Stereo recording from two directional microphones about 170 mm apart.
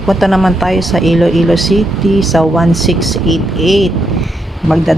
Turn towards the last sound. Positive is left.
turn(degrees=0)  # may be behind; listen again after turning